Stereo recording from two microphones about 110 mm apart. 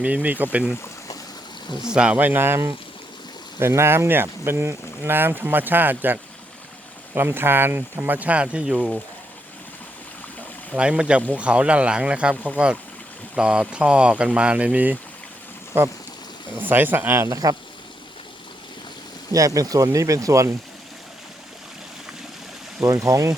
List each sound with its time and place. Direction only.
0.0 s speech: 15° right (ahead or behind)
1.9 s speech: 10° right (ahead or behind)
10.8 s speech: 10° right (ahead or behind)
17.2 s speech: 35° right (ahead or behind)
19.3 s speech: 30° right (ahead or behind)
22.8 s speech: 30° right (ahead or behind)